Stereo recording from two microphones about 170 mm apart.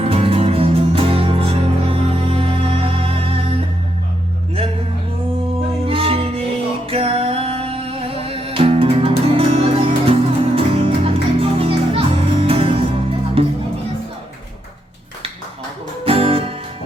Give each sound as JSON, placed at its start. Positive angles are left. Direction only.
{"t": 0.0, "sound": "music", "side_deg": -35}
{"t": 5.8, "sound": "music", "side_deg": -35}
{"t": 16.0, "sound": "music", "side_deg": -35}